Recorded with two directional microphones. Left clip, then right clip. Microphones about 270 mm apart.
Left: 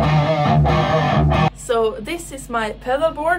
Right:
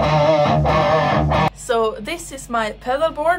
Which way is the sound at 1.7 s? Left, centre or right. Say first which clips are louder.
Even; centre.